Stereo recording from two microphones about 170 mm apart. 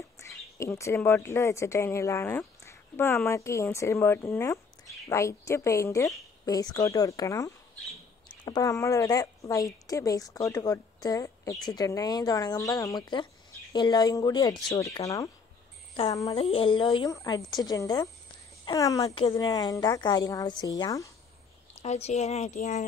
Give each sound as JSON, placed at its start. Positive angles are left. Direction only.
{"t": 0.2, "sound": "a woman's voice", "side_deg": 15}
{"t": 16.1, "sound": "a woman's voice", "side_deg": 20}
{"t": 16.3, "sound": "a woman's voice", "side_deg": 35}
{"t": 21.8, "sound": "speech", "side_deg": 40}